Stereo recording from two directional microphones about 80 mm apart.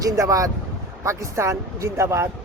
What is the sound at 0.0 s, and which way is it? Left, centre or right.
Speech, right.